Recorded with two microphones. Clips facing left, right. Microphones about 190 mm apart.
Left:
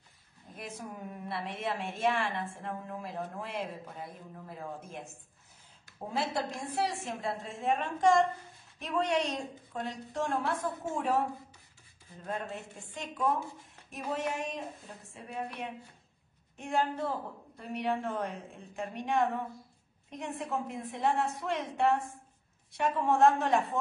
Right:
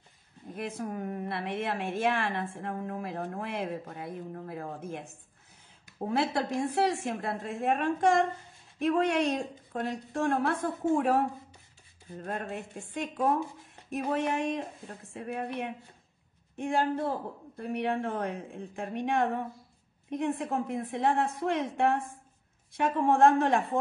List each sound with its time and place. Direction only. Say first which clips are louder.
0.6 s a woman's voice: right 7 dB; 55° right (ahead or behind)
6.0 s a woman's voice: right 4 dB; 60° right (ahead or behind)
12.3 s a woman's voice: right 2 dB; 55° right (ahead or behind)